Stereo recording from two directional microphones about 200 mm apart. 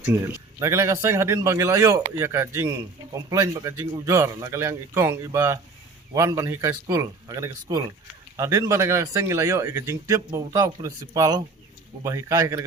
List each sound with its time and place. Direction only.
0.6 s speech: 15° right (ahead or behind)